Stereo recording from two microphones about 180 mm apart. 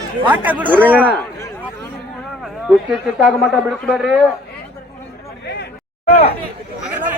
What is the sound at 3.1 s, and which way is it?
Speech, centre (ahead or behind).